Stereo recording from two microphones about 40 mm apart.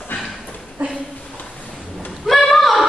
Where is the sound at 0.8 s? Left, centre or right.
Right.